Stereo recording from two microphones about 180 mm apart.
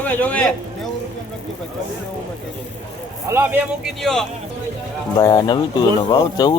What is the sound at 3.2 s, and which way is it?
A man's voice, 10° right (ahead or behind).